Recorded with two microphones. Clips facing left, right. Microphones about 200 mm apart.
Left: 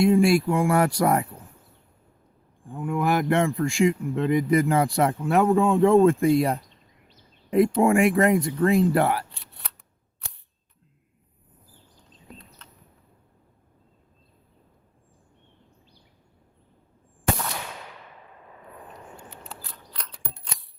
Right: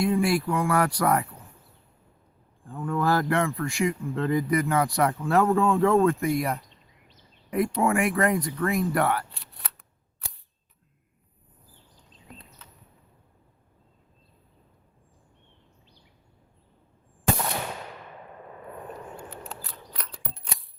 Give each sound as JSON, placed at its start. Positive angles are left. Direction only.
{"t": 0.0, "sound": "speech", "side_deg": 25}
{"t": 2.6, "sound": "speech", "side_deg": 15}
{"t": 19.7, "sound": "a sound", "side_deg": -5}